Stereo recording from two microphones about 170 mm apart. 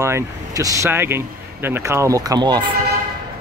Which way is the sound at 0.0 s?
20° right (ahead or behind).